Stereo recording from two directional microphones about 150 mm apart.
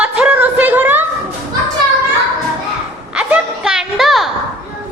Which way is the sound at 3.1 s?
5° right (ahead or behind).